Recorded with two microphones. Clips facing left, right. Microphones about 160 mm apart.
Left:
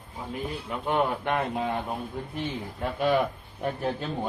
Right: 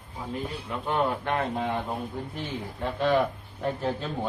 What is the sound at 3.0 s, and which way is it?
Speech, 15° left (ahead or behind).